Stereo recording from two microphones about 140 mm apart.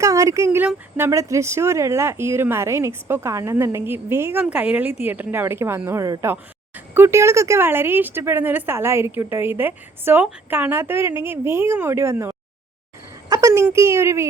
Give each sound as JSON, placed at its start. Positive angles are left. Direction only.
{"t": 0.0, "sound": "a woman's voice", "side_deg": -25}